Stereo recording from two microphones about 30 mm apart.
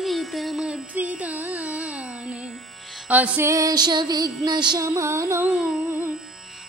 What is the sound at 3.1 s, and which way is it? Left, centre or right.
Music, right.